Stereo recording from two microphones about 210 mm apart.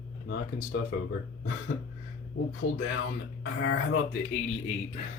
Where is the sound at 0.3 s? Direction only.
55° left (ahead or behind).